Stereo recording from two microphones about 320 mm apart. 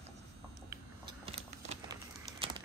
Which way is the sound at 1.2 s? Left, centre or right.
Centre.